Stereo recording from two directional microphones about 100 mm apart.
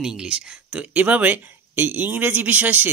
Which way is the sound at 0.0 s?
5° right (ahead or behind).